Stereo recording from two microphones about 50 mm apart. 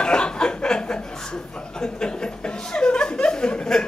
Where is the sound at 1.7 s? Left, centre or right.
Centre.